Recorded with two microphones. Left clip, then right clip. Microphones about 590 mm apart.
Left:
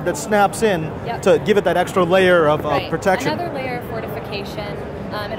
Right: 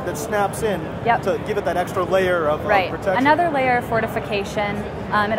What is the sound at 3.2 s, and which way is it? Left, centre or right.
A woman's voice, right.